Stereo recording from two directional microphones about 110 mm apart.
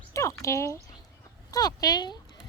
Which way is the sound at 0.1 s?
30° left (ahead or behind).